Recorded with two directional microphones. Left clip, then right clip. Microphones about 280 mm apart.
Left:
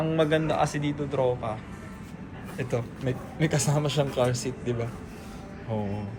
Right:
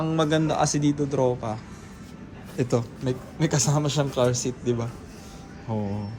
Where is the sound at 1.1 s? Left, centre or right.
Right.